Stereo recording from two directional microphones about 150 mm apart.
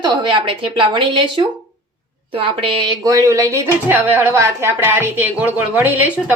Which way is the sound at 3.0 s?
20° right (ahead or behind).